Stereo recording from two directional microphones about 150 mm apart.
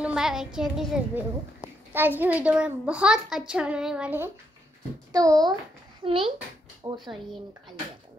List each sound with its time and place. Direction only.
0.0 s a child's voice: 5° right (ahead or behind)
1.9 s a child's voice: 15° right (ahead or behind)
5.1 s a child's voice: 25° right (ahead or behind)
6.0 s a child's voice: 35° right (ahead or behind)